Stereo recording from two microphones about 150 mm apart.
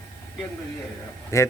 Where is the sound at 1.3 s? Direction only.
20° left (ahead or behind).